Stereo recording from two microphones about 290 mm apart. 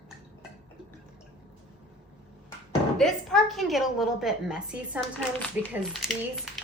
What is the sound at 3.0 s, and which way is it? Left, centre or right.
A woman's voice, centre.